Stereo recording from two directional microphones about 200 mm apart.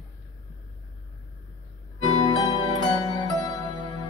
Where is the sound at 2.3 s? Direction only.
20° left (ahead or behind).